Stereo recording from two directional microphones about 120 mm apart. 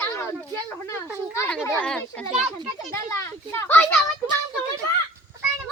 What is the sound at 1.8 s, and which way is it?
Speech, 10° left (ahead or behind).